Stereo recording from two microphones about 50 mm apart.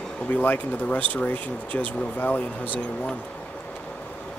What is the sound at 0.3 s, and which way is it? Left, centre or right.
Speech, left.